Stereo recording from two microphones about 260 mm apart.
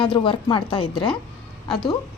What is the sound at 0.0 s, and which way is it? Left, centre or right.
A woman's voice, centre.